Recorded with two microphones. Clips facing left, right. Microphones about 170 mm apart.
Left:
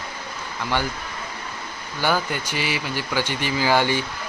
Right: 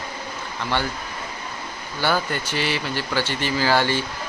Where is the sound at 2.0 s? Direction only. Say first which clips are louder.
Even; 10° left (ahead or behind).